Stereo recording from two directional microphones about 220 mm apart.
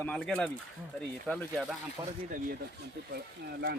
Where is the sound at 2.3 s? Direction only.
35° right (ahead or behind).